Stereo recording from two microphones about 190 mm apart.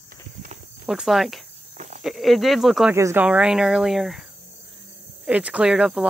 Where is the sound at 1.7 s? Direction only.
35° right (ahead or behind).